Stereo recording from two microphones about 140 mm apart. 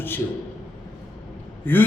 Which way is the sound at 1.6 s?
15° left (ahead or behind).